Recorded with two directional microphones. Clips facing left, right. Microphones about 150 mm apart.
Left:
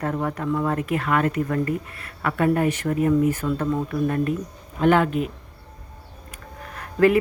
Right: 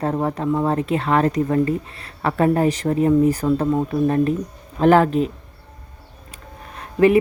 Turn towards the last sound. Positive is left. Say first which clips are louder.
# right 3 dB
turn(degrees=-20)  # may be behind; listen again after turning